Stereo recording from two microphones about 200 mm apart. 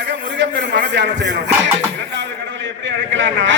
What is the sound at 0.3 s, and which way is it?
Speech, 60° right (ahead or behind).